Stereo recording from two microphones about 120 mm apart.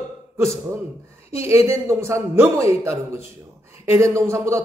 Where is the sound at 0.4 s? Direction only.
25° right (ahead or behind).